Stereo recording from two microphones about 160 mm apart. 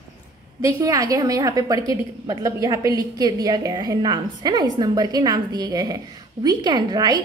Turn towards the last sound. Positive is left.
turn(degrees=-25)  # may be behind; listen again after turning